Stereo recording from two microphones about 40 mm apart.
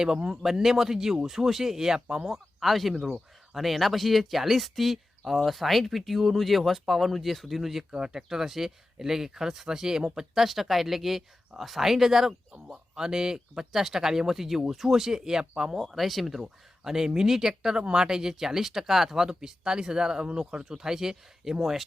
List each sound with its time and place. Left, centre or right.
0.0 s speech: centre
0.4 s speech: centre
7.9 s speech: centre
10.3 s speech: centre